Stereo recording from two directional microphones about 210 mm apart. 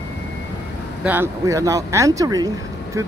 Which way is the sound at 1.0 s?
10° right (ahead or behind).